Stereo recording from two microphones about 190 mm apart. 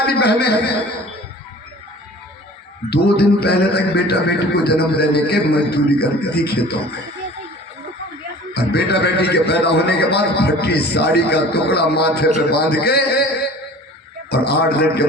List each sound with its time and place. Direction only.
0.1 s a man's voice: 60° left (ahead or behind)
2.9 s a man's voice: 55° left (ahead or behind)
8.5 s a man's voice: 60° left (ahead or behind)
14.3 s a man's voice: 55° left (ahead or behind)